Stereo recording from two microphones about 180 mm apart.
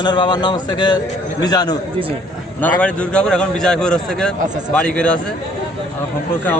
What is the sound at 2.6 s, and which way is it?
A man's voice, 5° left (ahead or behind).